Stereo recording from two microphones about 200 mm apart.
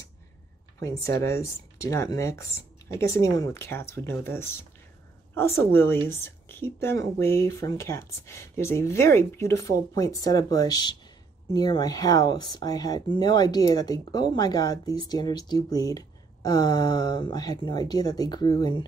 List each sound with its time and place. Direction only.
0.7 s a woman's voice: 15° left (ahead or behind)